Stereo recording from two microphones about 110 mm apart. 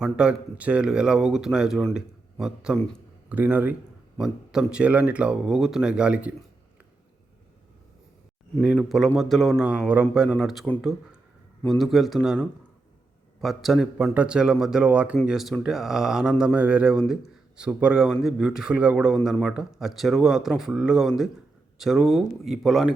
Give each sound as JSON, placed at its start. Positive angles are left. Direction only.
{"t": 0.0, "sound": "speech", "side_deg": -10}
{"t": 2.7, "sound": "a man's voice", "side_deg": 5}
{"t": 3.2, "sound": "speech", "side_deg": -15}
{"t": 8.6, "sound": "a man's voice", "side_deg": -10}
{"t": 10.2, "sound": "a man's voice", "side_deg": 0}
{"t": 11.7, "sound": "a man's voice", "side_deg": 0}
{"t": 15.3, "sound": "a man's voice", "side_deg": 0}